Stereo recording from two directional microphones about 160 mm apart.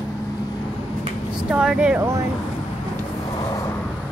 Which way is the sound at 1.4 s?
5° right (ahead or behind).